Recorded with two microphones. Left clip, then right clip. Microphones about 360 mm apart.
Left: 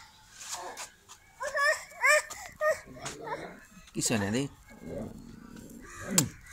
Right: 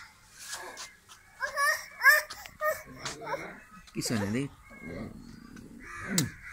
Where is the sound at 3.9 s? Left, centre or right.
Centre.